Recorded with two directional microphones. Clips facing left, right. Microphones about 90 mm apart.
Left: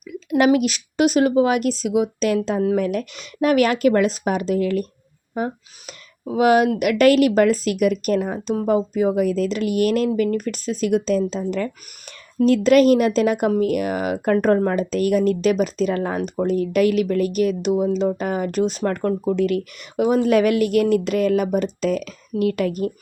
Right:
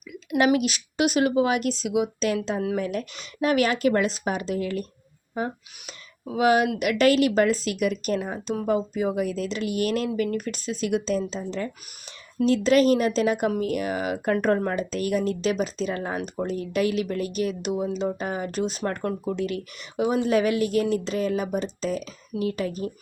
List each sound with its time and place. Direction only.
0.1 s speech: 40° left (ahead or behind)
10.1 s speech: 35° left (ahead or behind)
14.3 s speech: 40° left (ahead or behind); by 22.9 s 65° left (ahead or behind)